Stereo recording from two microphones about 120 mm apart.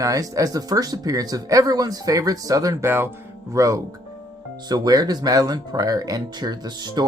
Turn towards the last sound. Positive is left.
turn(degrees=-35)  # may be behind; listen again after turning